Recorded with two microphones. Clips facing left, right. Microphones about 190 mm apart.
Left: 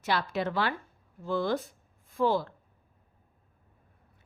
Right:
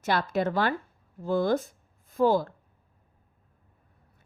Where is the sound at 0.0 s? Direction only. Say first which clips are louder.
Right 3 dB; 45° right (ahead or behind).